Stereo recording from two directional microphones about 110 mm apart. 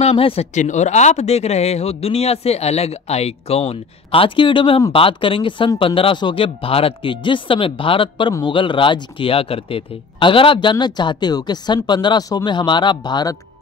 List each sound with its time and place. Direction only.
0.0 s a man's voice: 60° left (ahead or behind)
8.3 s speech: 40° left (ahead or behind)